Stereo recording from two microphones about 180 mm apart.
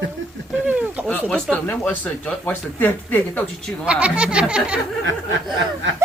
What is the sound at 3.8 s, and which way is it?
Speech, 5° right (ahead or behind).